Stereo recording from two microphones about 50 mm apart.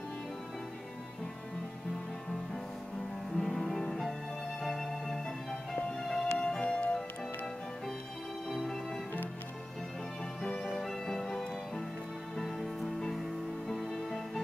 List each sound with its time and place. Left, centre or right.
3.3 s music: centre
8.5 s music: centre
10.4 s music: centre
10.7 s music: centre